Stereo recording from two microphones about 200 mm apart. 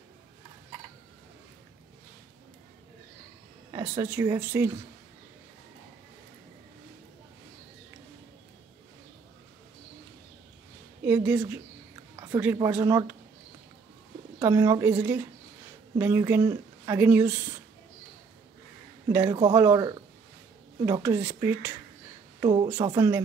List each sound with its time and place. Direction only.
3.9 s speech: 15° right (ahead or behind)
11.1 s a woman's voice: 10° right (ahead or behind)
12.2 s a sound: 15° right (ahead or behind)
12.5 s speech: 15° right (ahead or behind)
14.4 s speech: 15° right (ahead or behind)
19.0 s speech: 15° right (ahead or behind)
22.4 s speech: 25° right (ahead or behind)